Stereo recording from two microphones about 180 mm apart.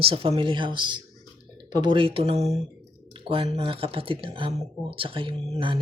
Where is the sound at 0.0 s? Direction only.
30° right (ahead or behind).